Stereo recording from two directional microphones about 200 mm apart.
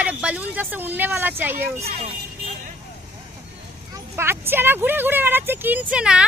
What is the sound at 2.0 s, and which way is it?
Vehicle, 30° right (ahead or behind).